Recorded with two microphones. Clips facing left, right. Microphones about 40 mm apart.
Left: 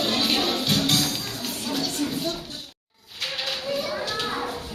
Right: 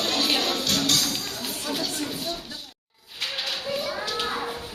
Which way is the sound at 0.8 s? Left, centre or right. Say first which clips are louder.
Left 1 dB; centre.